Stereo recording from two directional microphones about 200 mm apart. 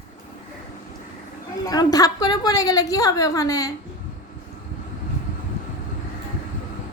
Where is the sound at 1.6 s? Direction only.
20° left (ahead or behind).